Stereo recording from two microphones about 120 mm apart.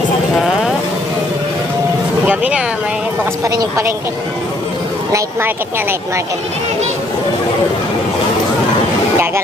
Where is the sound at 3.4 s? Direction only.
30° right (ahead or behind).